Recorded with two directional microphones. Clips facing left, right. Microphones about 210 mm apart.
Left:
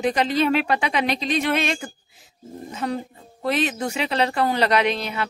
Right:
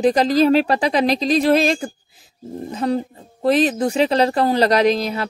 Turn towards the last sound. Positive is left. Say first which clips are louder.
# right 5 dB
turn(degrees=-35)  # may be behind; listen again after turning